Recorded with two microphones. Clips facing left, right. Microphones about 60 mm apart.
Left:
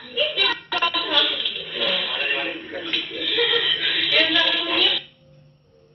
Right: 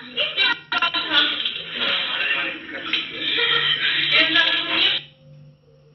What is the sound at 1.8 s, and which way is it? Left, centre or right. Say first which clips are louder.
Radio: right 1 dB; right.